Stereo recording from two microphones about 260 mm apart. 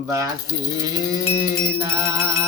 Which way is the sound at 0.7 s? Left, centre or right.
Centre.